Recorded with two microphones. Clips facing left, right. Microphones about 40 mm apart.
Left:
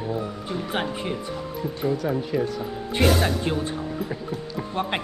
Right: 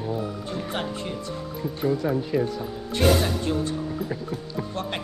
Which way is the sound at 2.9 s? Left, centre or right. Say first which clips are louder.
Even; centre.